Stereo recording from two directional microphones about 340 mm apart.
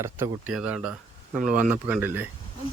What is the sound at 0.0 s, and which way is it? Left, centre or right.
Speech, centre.